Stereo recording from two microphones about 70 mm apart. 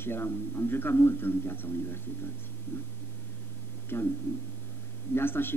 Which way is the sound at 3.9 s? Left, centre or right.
Left.